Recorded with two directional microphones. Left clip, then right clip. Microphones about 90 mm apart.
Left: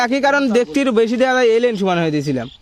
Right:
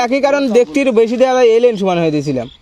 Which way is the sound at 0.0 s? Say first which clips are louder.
Right 2 dB; 30° left (ahead or behind).